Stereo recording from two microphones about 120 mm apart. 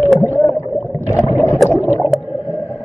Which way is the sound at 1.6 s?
Centre (ahead or behind).